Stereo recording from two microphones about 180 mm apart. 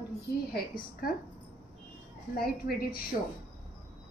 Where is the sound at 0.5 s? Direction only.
55° left (ahead or behind).